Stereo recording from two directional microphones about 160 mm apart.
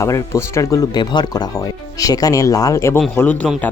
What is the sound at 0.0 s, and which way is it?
Speech, 20° left (ahead or behind).